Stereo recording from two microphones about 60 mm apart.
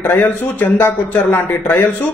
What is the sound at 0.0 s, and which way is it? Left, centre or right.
A man's voice, left.